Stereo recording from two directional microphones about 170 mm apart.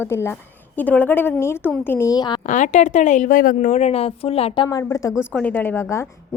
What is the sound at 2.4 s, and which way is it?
A woman's voice, 45° left (ahead or behind).